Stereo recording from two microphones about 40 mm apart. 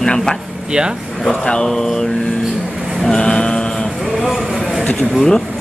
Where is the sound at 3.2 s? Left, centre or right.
Left.